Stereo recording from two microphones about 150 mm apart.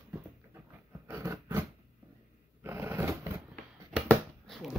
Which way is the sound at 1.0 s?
15° right (ahead or behind).